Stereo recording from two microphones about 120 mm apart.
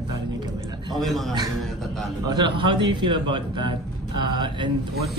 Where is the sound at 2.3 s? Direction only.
40° right (ahead or behind).